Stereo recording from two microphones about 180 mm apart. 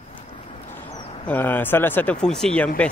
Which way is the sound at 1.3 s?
10° left (ahead or behind).